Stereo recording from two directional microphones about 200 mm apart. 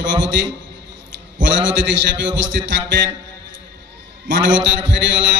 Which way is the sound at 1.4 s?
65° right (ahead or behind).